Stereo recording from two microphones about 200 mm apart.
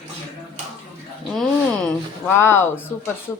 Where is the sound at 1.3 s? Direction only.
Centre (ahead or behind).